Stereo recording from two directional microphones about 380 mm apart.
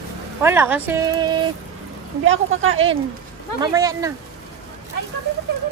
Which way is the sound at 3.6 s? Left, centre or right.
Centre.